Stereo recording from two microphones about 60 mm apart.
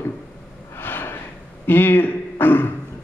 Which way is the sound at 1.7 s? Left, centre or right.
Left.